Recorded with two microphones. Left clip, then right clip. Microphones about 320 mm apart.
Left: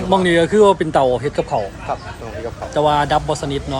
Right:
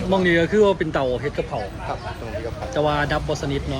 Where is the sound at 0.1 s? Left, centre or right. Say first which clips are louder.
Left 4 dB; centre.